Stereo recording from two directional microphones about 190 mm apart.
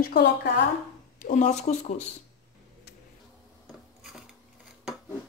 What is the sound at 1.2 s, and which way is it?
Speech, 40° left (ahead or behind).